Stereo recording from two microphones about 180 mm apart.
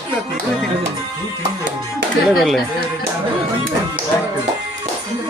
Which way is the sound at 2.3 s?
Centre (ahead or behind).